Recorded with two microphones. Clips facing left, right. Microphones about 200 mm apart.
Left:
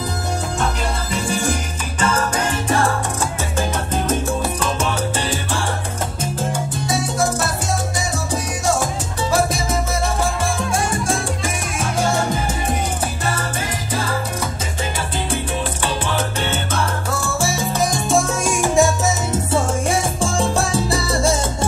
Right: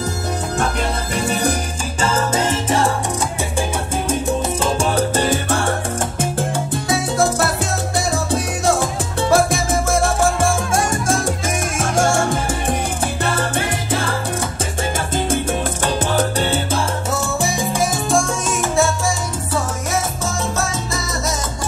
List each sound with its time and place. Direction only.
2.0 s music: 25° right (ahead or behind)
4.6 s salsa music: 30° right (ahead or behind)
9.3 s music: 50° right (ahead or behind)
13.2 s salsa music: 55° right (ahead or behind)
15.8 s salsa music: 40° right (ahead or behind)
17.1 s salsa music: 20° right (ahead or behind)
18.1 s music: 5° left (ahead or behind)
19.3 s salsa music: 25° left (ahead or behind)